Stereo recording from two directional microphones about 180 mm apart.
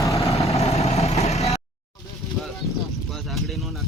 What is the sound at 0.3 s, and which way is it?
Vehicle, 35° left (ahead or behind).